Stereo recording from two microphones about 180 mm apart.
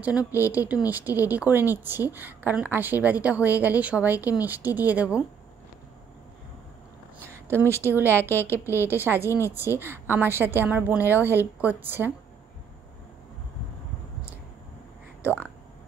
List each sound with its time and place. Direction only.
0.2 s a woman's voice: 15° left (ahead or behind)
0.5 s a woman's voice: 10° right (ahead or behind)
7.2 s a sound: 15° right (ahead or behind)
7.7 s a woman's voice: 15° right (ahead or behind)
8.1 s a woman's voice: 10° left (ahead or behind)
8.8 s a woman's voice: 10° right (ahead or behind)